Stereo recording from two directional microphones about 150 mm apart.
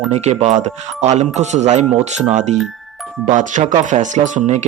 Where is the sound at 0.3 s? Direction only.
45° right (ahead or behind).